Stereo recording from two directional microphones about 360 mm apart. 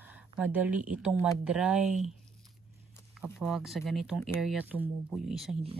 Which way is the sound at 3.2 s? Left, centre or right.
Centre.